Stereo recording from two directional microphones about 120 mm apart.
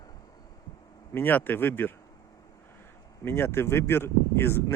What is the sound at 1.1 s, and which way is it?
Speech, 15° left (ahead or behind).